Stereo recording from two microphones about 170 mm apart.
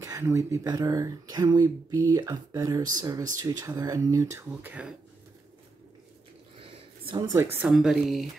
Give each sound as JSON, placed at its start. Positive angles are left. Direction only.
{"t": 0.0, "sound": "speech", "side_deg": -15}
{"t": 6.6, "sound": "a sound", "side_deg": -25}
{"t": 7.5, "sound": "speech", "side_deg": -5}